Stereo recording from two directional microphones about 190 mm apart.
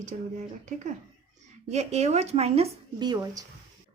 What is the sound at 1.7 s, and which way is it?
Speech, 35° right (ahead or behind).